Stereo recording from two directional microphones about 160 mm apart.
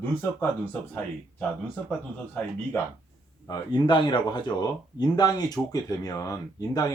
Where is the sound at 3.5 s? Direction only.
30° left (ahead or behind).